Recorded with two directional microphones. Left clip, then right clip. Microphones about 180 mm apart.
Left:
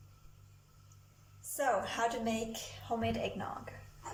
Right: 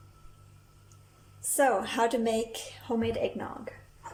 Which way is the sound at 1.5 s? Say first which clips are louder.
Right 7 dB; 60° right (ahead or behind).